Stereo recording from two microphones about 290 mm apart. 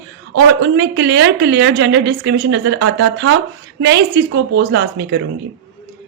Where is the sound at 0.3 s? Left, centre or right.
Right.